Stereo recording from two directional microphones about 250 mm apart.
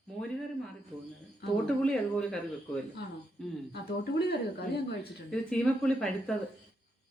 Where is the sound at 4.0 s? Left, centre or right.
Left.